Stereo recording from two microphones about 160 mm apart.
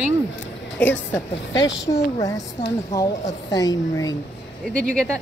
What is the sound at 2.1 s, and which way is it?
A woman's voice, 20° left (ahead or behind).